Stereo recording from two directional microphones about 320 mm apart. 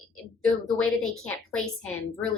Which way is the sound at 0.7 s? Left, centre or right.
Centre.